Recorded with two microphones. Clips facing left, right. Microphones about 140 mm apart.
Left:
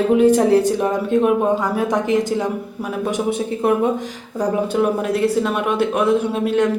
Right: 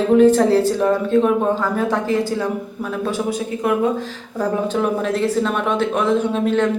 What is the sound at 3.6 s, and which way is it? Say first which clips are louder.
Speech: left 2 dB; 25° left (ahead or behind).